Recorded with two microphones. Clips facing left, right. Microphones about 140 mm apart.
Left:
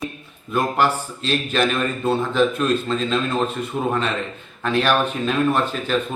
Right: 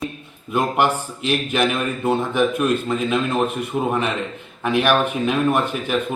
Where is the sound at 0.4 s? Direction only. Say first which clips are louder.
Right 1 dB; 20° right (ahead or behind).